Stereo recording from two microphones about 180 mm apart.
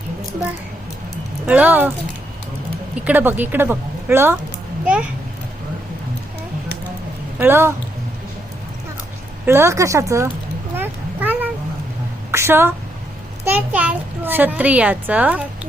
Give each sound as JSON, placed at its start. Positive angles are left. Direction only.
{"t": 1.5, "sound": "a child's voice", "side_deg": -10}
{"t": 3.0, "sound": "a child's voice", "side_deg": -10}
{"t": 7.3, "sound": "a child's voice", "side_deg": -15}
{"t": 9.5, "sound": "a child's voice", "side_deg": -15}
{"t": 10.8, "sound": "a sound", "side_deg": -10}
{"t": 12.3, "sound": "a woman's voice", "side_deg": -15}